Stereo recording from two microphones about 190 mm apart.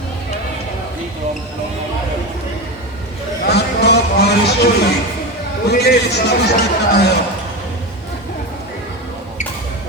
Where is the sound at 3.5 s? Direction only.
60° left (ahead or behind).